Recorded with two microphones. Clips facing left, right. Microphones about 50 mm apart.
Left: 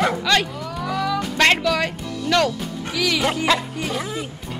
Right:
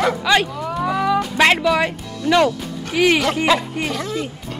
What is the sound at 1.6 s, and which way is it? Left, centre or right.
Music, centre.